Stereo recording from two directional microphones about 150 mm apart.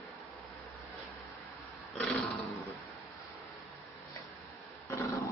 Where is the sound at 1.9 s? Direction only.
5° left (ahead or behind).